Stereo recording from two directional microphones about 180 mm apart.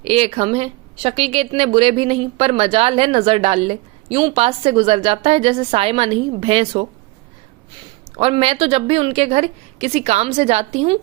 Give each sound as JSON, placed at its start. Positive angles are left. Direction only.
{"t": 0.0, "sound": "a woman's voice", "side_deg": -35}
{"t": 8.1, "sound": "a woman's voice", "side_deg": -30}